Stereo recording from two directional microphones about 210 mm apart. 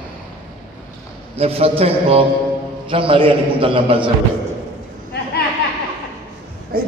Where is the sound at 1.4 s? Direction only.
30° right (ahead or behind).